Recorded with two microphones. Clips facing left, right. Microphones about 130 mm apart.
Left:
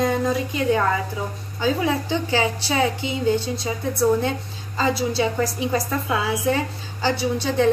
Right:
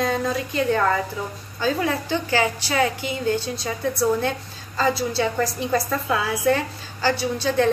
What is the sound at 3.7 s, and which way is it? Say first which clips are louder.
A woman's voice: left 2 dB; 10° left (ahead or behind).